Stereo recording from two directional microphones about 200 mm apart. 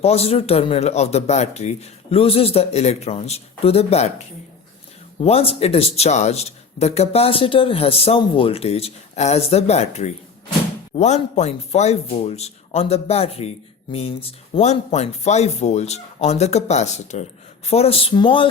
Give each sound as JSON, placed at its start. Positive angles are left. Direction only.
{"t": 0.0, "sound": "speech", "side_deg": 30}
{"t": 5.2, "sound": "speech", "side_deg": 30}